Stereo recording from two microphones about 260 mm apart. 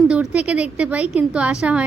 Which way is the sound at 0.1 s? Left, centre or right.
Centre.